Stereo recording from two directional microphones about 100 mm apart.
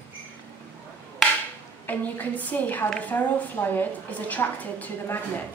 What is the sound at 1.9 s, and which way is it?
A woman's voice, 15° left (ahead or behind).